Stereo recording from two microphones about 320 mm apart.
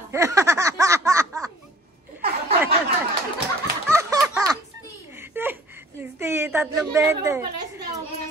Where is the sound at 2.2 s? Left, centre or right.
Right.